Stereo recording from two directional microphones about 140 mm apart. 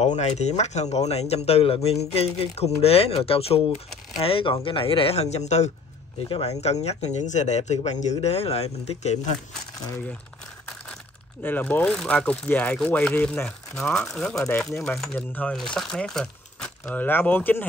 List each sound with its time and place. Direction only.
0.0 s speech: 50° left (ahead or behind)
6.1 s speech: 40° left (ahead or behind)
11.4 s speech: 15° left (ahead or behind)